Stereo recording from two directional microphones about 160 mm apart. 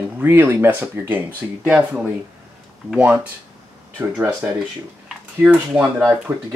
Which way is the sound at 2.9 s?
10° right (ahead or behind).